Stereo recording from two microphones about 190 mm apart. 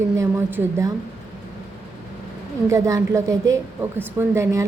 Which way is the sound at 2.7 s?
15° right (ahead or behind).